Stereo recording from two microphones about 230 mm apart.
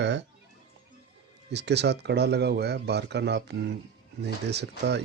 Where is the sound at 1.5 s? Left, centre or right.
Right.